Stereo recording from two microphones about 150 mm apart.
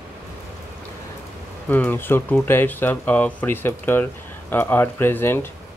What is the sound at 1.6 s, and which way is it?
Speech, 10° left (ahead or behind).